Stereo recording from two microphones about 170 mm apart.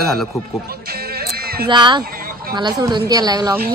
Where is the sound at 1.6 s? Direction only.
25° right (ahead or behind).